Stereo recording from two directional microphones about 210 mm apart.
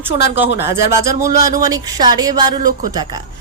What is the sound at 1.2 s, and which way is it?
Speech, 45° left (ahead or behind).